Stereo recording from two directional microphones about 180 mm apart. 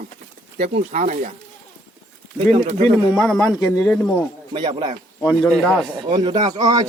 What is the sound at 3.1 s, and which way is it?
Speech, centre (ahead or behind).